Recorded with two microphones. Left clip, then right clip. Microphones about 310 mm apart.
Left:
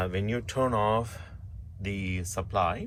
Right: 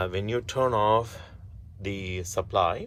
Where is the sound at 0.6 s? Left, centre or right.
Centre.